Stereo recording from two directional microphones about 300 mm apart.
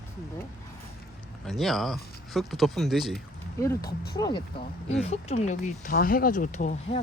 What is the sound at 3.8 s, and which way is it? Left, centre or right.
Speech, left.